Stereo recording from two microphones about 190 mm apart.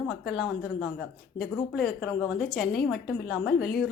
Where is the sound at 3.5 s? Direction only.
55° left (ahead or behind).